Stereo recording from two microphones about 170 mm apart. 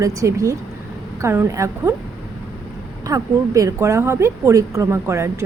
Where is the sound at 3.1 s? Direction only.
20° right (ahead or behind).